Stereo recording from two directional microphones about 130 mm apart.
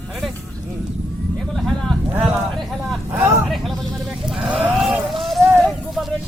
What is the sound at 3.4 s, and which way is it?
Vehicle, centre (ahead or behind).